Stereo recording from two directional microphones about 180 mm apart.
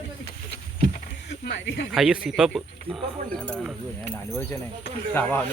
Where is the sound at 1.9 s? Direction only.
5° right (ahead or behind).